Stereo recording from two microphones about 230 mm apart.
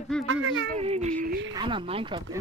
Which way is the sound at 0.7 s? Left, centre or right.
Right.